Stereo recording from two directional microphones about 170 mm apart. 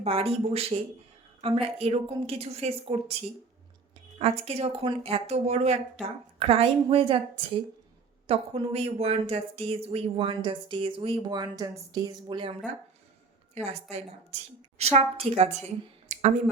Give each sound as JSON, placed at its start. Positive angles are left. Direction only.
{"t": 0.0, "sound": "speech", "side_deg": -35}
{"t": 13.6, "sound": "a woman's voice", "side_deg": -45}
{"t": 14.8, "sound": "speech", "side_deg": -40}
{"t": 15.6, "sound": "a sound", "side_deg": -40}